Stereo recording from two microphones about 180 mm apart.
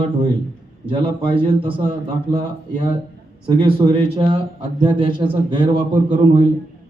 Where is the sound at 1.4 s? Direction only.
30° right (ahead or behind).